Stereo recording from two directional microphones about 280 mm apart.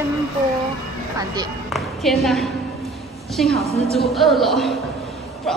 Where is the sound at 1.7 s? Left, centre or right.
Centre.